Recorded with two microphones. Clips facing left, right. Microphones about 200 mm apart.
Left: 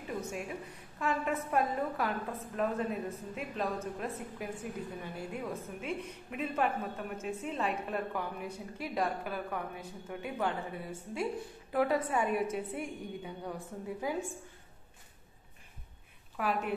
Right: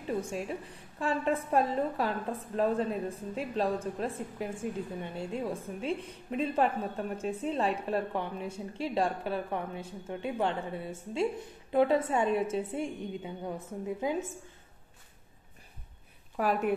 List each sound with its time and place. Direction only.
0.9 s a woman's voice: 30° right (ahead or behind)
16.3 s a woman's voice: 45° right (ahead or behind)